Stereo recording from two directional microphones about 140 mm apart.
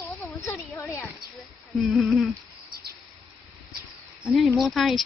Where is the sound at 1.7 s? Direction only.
Centre (ahead or behind).